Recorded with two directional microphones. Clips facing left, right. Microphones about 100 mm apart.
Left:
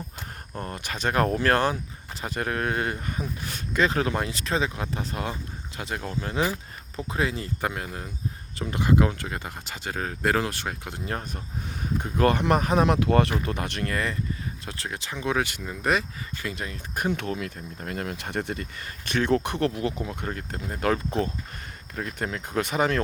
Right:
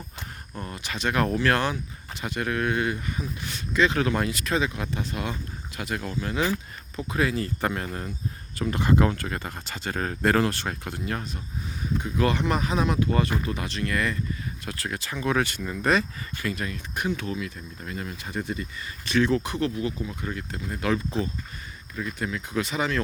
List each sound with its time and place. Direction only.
0.6 s speech: 45° left (ahead or behind); by 7.5 s 20° left (ahead or behind)
7.6 s speech: 10° left (ahead or behind)
11.0 s speech: 35° left (ahead or behind)
11.9 s speech: 45° left (ahead or behind); by 13.3 s 75° left (ahead or behind)
13.4 s speech: 60° left (ahead or behind)
13.9 s speech: 30° left (ahead or behind)
16.9 s speech: 45° left (ahead or behind)
17.2 s speech: 55° left (ahead or behind)
20.2 s speech: 45° left (ahead or behind)